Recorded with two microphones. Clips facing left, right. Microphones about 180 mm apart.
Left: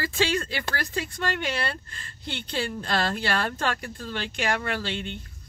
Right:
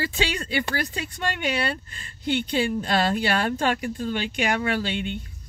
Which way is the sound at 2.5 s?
15° right (ahead or behind).